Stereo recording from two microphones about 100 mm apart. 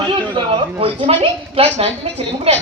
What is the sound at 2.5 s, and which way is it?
Speech, 90° right.